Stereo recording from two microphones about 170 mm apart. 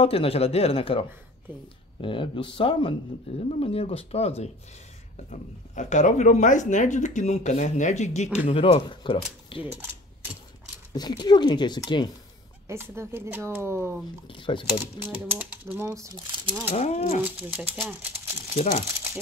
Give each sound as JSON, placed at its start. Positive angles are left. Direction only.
{"t": 0.0, "sound": "speech", "side_deg": 35}
{"t": 10.9, "sound": "speech", "side_deg": 25}
{"t": 12.6, "sound": "speech", "side_deg": -15}
{"t": 14.2, "sound": "speech", "side_deg": 30}
{"t": 15.0, "sound": "speech", "side_deg": -10}
{"t": 16.7, "sound": "speech", "side_deg": 40}
{"t": 17.2, "sound": "speech", "side_deg": -10}
{"t": 18.6, "sound": "speech", "side_deg": 40}